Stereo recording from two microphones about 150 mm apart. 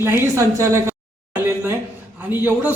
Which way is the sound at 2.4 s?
10° right (ahead or behind).